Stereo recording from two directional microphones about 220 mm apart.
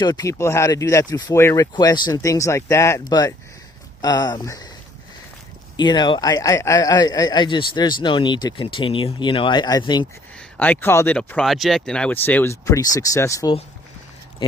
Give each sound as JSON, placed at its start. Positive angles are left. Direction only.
{"t": 0.0, "sound": "speech", "side_deg": 15}
{"t": 5.7, "sound": "speech", "side_deg": 20}
{"t": 10.6, "sound": "speech", "side_deg": 10}